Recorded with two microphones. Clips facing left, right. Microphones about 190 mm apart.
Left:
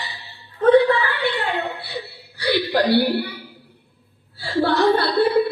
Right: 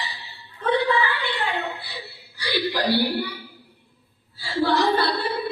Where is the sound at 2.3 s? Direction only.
60° left (ahead or behind).